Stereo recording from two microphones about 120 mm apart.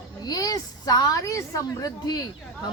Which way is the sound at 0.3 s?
30° left (ahead or behind).